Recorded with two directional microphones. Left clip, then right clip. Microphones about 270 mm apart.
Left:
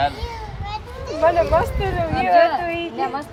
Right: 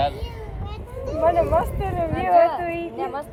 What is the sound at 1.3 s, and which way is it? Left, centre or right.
Speech, left.